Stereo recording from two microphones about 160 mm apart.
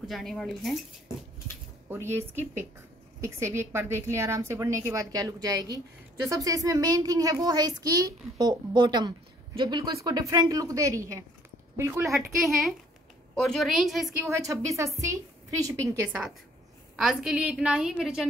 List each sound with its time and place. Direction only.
0.1 s a woman's voice: centre (ahead or behind)
1.9 s a woman's voice: 15° right (ahead or behind)
12.4 s a woman's voice: centre (ahead or behind)
14.3 s speech: 20° right (ahead or behind)
16.9 s a woman's voice: 5° right (ahead or behind)